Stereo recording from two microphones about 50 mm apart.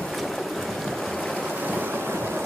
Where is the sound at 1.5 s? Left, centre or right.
Right.